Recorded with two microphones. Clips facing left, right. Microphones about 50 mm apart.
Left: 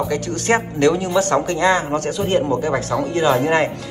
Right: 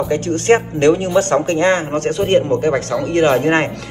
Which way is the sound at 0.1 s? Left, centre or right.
Right.